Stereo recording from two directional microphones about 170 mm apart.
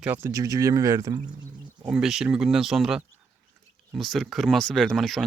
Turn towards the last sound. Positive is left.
turn(degrees=0)  # may be behind; listen again after turning